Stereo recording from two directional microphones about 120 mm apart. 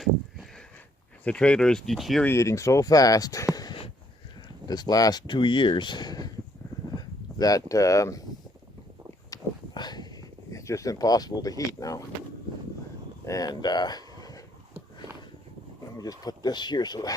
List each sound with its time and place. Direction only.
1.2 s speech: 10° left (ahead or behind)
2.2 s speech: 25° left (ahead or behind)
9.3 s a sound: 35° left (ahead or behind)
13.2 s speech: 30° left (ahead or behind)
16.0 s speech: 30° left (ahead or behind)